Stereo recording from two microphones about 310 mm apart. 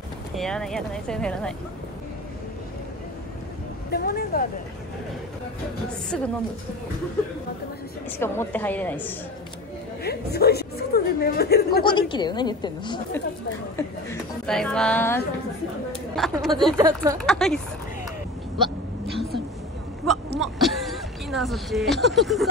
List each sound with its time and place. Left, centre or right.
0.4 s speech: centre
3.9 s speech: left
6.0 s speech: centre
8.2 s speech: centre
10.0 s a woman's voice: left
11.8 s a woman's voice: centre
14.4 s speech: centre
16.7 s speech: centre
17.2 s speech: centre
20.3 s a sound: centre